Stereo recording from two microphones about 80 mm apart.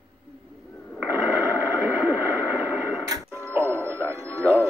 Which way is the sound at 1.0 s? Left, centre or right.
Right.